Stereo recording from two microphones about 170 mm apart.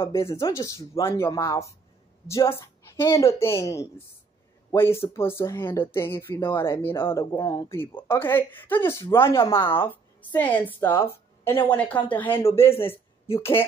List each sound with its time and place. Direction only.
0.0 s a woman's voice: 15° left (ahead or behind)
12.6 s a man's voice: 35° left (ahead or behind)
13.4 s speech: 15° left (ahead or behind)